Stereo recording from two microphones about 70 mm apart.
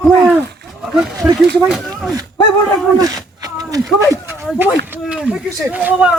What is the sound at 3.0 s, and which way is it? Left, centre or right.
Speech, right.